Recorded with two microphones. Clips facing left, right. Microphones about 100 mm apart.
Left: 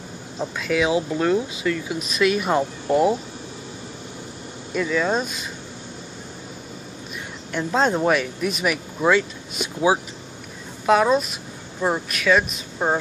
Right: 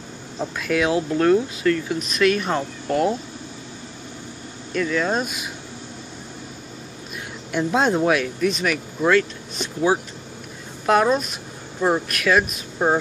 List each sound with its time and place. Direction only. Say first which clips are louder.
0.4 s speech: even; centre (ahead or behind)
4.7 s speech: even; 5° left (ahead or behind)
7.5 s speech: right 1 dB; 5° right (ahead or behind)